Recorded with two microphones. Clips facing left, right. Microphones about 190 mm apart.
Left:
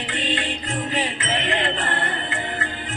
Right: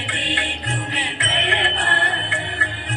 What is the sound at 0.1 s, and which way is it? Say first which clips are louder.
Music: left 2 dB; 70° right (ahead or behind).